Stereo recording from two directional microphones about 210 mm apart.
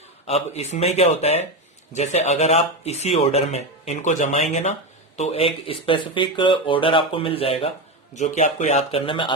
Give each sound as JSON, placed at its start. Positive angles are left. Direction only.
{"t": 0.3, "sound": "speech", "side_deg": 30}